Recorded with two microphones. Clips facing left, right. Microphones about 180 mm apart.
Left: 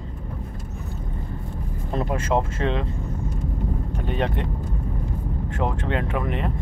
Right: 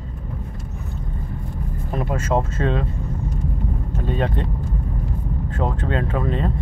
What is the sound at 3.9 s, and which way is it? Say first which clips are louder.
Vehicle: right 3 dB; 20° left (ahead or behind).